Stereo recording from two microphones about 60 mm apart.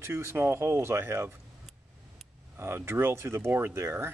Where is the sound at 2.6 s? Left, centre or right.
Right.